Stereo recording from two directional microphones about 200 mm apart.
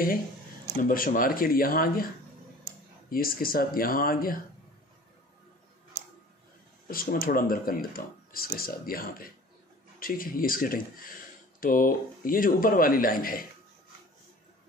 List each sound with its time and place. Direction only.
0.8 s speech: 45° left (ahead or behind)
3.1 s speech: 45° left (ahead or behind)
6.9 s speech: 45° left (ahead or behind)